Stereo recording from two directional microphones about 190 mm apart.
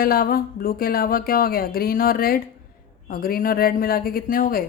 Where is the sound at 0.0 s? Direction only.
50° left (ahead or behind).